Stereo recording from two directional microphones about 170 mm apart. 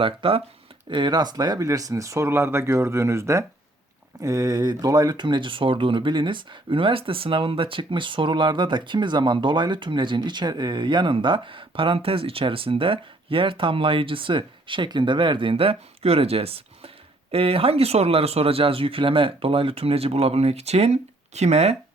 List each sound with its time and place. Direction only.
0.0 s speech: 30° right (ahead or behind)